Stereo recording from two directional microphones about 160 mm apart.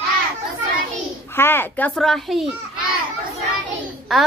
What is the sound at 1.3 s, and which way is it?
Speech, 15° left (ahead or behind).